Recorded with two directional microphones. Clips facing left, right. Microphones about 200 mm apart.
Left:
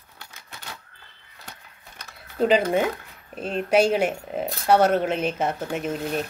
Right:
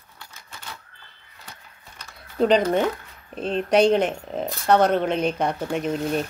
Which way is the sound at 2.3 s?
5° left (ahead or behind).